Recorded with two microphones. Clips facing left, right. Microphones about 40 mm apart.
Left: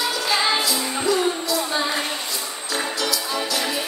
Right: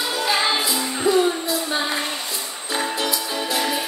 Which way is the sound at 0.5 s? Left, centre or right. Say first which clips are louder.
Even; right.